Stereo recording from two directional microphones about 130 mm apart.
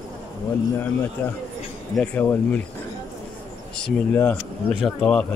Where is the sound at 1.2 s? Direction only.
15° left (ahead or behind).